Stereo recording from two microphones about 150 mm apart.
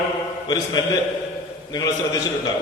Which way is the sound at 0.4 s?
25° left (ahead or behind).